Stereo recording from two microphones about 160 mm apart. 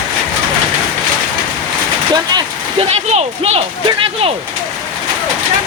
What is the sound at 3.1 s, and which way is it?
Speech, 40° right (ahead or behind).